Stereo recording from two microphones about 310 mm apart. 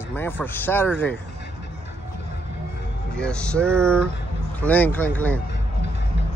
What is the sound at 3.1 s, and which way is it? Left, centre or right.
Speech, centre.